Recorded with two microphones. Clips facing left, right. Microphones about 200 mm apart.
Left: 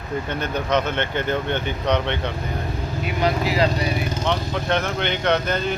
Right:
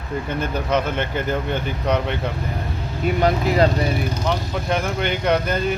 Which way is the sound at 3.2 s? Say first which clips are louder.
Right 2 dB; 45° right (ahead or behind).